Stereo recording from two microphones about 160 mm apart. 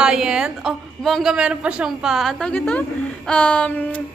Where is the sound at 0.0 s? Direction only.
5° right (ahead or behind).